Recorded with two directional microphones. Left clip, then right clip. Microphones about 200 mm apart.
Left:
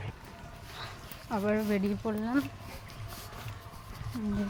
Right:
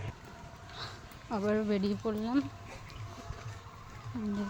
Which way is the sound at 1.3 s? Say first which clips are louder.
Left 1 dB; 5° left (ahead or behind).